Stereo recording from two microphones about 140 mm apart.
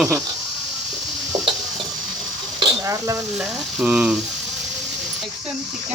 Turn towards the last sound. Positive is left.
turn(degrees=-5)  # may be behind; listen again after turning